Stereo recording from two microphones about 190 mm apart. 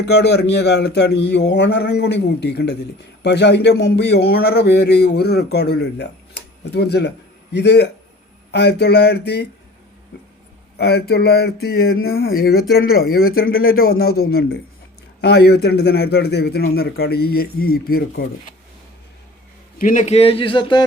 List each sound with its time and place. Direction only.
0.1 s a man's voice: 60° left (ahead or behind)
10.8 s a man's voice: 60° left (ahead or behind)
19.8 s speech: 40° left (ahead or behind); by 20.8 s 25° left (ahead or behind)